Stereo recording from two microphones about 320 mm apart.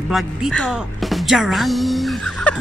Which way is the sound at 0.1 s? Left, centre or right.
Centre.